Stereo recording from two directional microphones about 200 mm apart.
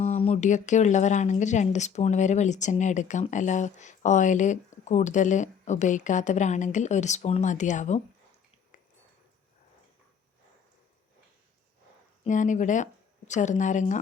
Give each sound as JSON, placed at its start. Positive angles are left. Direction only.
{"t": 0.0, "sound": "speech", "side_deg": 30}
{"t": 12.2, "sound": "speech", "side_deg": 40}